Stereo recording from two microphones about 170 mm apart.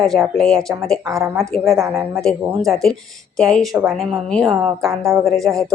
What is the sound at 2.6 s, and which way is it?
Speech, 5° left (ahead or behind).